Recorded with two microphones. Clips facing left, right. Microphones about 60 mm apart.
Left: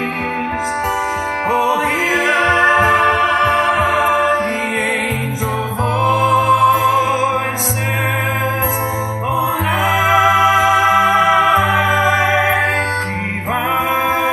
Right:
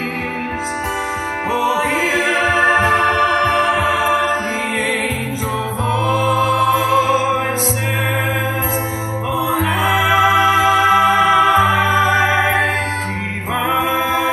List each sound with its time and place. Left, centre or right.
1.5 s music: left
6.1 s music: centre
9.8 s music: centre